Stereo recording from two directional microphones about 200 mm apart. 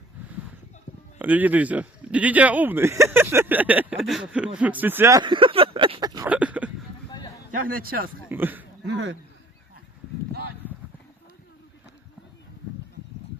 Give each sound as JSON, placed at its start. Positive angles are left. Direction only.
{"t": 1.2, "sound": "speech", "side_deg": -10}
{"t": 6.2, "sound": "a sound", "side_deg": -5}
{"t": 7.7, "sound": "speech", "side_deg": -45}
{"t": 8.3, "sound": "speech", "side_deg": -10}
{"t": 8.8, "sound": "speech", "side_deg": -65}